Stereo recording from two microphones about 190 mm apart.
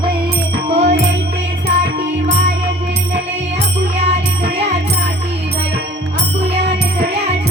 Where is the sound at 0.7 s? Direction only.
35° right (ahead or behind).